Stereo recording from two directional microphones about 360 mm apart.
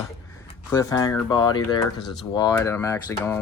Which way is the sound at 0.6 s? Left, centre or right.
Centre.